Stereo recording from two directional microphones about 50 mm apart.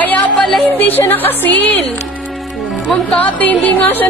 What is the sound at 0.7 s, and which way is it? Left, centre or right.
Speech, left.